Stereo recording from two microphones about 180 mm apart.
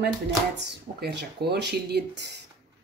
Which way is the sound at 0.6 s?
70° right (ahead or behind).